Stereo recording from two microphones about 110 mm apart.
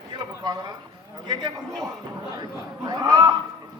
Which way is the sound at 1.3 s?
40° right (ahead or behind).